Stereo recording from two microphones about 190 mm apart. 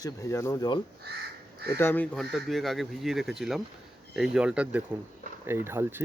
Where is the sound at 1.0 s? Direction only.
60° right (ahead or behind).